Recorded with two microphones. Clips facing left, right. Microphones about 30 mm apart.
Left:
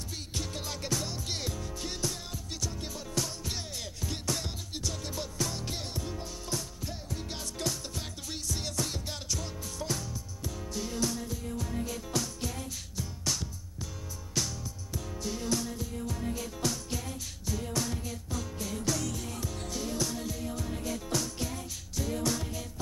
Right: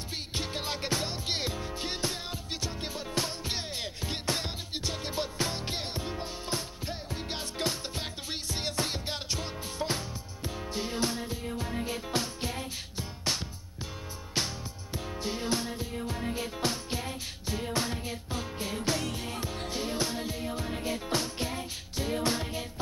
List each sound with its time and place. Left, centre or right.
0.3 s music: right